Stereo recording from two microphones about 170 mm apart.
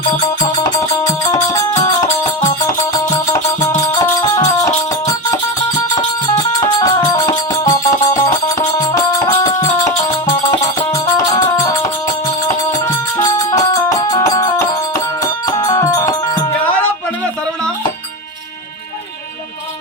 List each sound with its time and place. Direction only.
0.6 s music: 20° left (ahead or behind)
3.8 s music: 20° left (ahead or behind)
12.7 s music: 20° left (ahead or behind)